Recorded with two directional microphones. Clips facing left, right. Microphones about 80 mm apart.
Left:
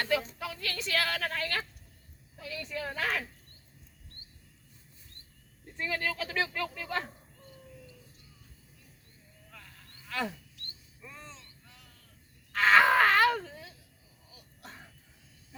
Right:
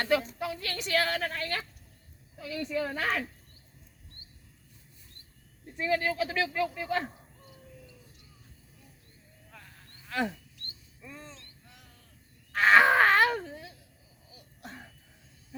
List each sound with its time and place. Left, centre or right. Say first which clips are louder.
0.0 s a woman's voice: right 3 dB; right
5.8 s a woman's voice: right 5 dB; right
10.1 s wild animals: right 3 dB; right
12.5 s a sound: right 2 dB; right